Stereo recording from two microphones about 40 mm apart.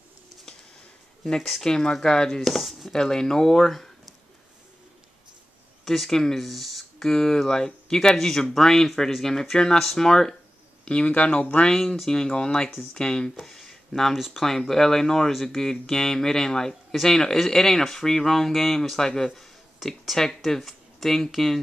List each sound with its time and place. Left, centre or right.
1.6 s speech: centre
2.4 s speech: centre
2.9 s speech: centre
5.9 s speech: centre
6.4 s a sound: centre
7.1 s speech: centre
11.1 s speech: left
11.6 s speech: centre
13.4 s a sound: centre
14.1 s speech: centre
14.4 s speech: centre
19.3 s a sound: centre
20.2 s speech: centre